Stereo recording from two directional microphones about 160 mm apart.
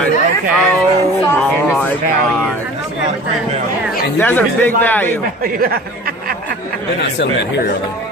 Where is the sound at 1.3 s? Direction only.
10° left (ahead or behind).